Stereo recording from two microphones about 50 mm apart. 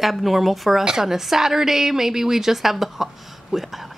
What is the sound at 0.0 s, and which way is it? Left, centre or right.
A woman's voice, centre.